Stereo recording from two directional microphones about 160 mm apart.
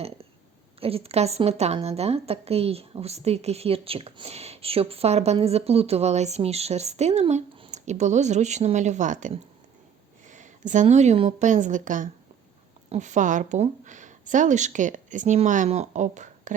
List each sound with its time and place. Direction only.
0.8 s a woman's voice: 35° right (ahead or behind)